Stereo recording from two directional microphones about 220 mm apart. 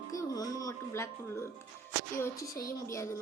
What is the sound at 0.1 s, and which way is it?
Speech, 15° left (ahead or behind).